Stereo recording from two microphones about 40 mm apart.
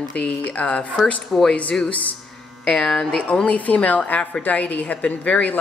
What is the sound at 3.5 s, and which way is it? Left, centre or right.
A woman's voice, left.